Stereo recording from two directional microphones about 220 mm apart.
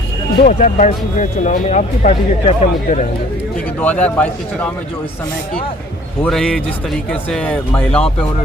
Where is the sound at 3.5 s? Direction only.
5° left (ahead or behind).